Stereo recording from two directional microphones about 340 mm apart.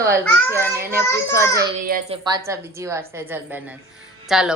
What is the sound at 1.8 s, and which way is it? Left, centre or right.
Speech, right.